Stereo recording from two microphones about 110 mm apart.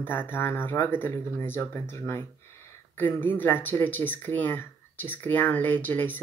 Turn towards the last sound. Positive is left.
turn(degrees=20)  # may be behind; listen again after turning